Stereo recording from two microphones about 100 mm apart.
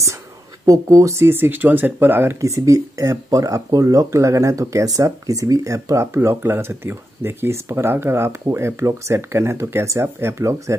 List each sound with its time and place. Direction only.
0.7 s speech: 35° right (ahead or behind)